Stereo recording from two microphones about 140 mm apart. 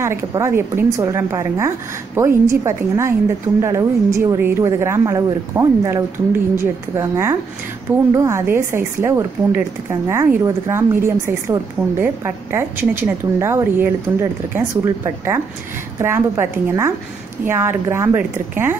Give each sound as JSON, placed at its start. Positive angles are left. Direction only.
{"t": 0.0, "sound": "a woman's voice", "side_deg": -20}